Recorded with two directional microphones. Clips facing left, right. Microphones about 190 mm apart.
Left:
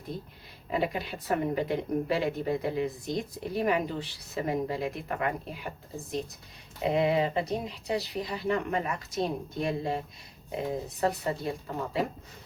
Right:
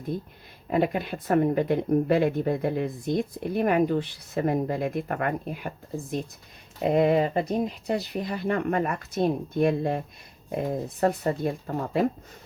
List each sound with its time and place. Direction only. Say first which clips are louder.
0.1 s speech: right 7 dB; 50° right (ahead or behind)